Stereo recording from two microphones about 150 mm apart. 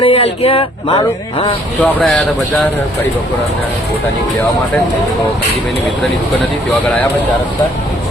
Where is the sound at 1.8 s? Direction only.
Centre (ahead or behind).